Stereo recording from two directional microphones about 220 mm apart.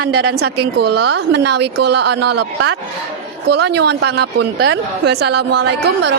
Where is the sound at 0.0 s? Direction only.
45° right (ahead or behind).